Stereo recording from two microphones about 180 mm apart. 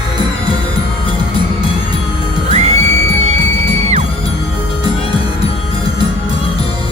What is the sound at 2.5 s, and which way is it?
Music, 40° right (ahead or behind).